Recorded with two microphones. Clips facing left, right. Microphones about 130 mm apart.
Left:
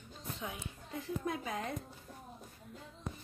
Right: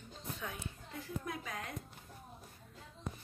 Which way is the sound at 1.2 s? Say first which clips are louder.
Left 6 dB; 25° left (ahead or behind).